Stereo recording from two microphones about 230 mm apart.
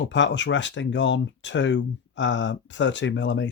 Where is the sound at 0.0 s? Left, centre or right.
Left.